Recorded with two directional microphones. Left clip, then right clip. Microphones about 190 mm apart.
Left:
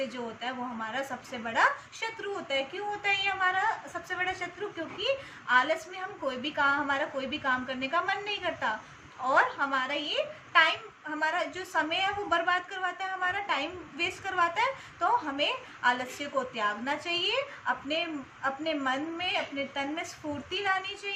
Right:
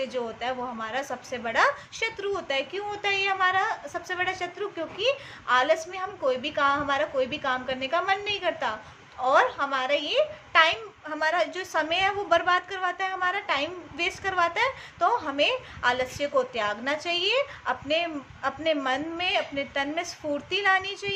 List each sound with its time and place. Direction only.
0.1 s a woman's voice: 60° right (ahead or behind)